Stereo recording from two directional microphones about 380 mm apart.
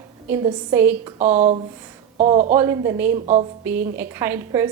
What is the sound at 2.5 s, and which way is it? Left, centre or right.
A woman's voice, centre.